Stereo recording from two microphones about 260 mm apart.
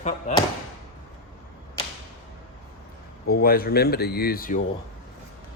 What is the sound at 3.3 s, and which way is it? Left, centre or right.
Speech, left.